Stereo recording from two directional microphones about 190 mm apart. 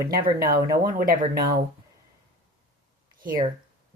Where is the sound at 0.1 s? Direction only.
50° right (ahead or behind).